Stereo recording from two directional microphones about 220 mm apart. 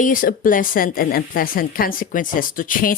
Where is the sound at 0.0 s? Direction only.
40° left (ahead or behind).